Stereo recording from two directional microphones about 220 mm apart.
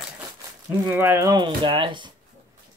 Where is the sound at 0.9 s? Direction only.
10° right (ahead or behind).